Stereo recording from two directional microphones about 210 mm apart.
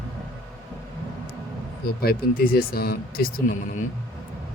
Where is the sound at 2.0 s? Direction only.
45° left (ahead or behind).